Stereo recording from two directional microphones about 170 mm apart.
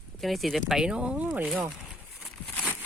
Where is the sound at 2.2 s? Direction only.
Centre (ahead or behind).